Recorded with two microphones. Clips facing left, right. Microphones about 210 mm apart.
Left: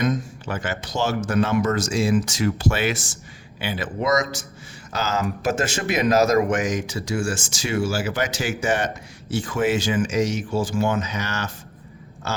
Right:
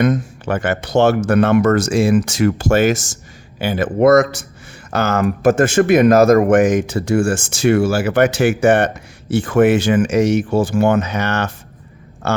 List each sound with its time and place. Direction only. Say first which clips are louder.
0.0 s speech: right 7 dB; 60° right (ahead or behind)